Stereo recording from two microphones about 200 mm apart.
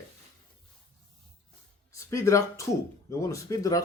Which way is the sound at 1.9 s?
15° left (ahead or behind).